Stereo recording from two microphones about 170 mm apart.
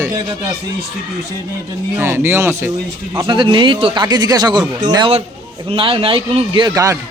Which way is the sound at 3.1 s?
25° right (ahead or behind).